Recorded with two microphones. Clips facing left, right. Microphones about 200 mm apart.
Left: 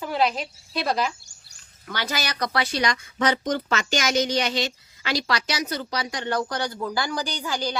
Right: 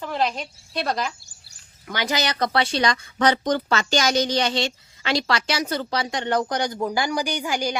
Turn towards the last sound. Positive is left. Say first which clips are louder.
# right 3 dB
turn(degrees=-15)  # may be behind; listen again after turning